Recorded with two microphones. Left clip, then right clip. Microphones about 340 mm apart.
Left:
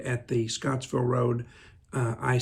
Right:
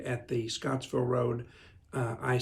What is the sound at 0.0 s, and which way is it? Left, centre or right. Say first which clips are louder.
Speech: left 4 dB; left.